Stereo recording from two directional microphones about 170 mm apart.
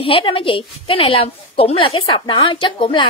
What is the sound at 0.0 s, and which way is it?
A woman's voice, 30° left (ahead or behind).